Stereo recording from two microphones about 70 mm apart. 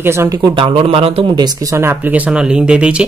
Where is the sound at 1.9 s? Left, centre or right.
Right.